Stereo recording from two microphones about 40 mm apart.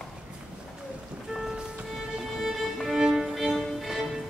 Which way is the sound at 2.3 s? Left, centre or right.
Centre.